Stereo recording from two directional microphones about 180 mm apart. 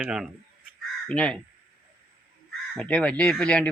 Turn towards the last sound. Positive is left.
turn(degrees=5)  # may be behind; listen again after turning